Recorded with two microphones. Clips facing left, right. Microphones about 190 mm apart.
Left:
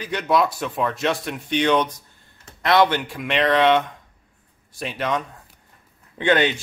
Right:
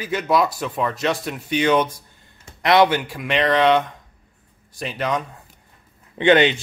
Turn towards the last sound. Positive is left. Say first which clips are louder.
# right 4 dB
turn(degrees=-20)  # may be behind; listen again after turning